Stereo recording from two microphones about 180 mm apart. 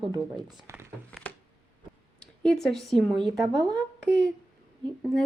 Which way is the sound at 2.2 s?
5° left (ahead or behind).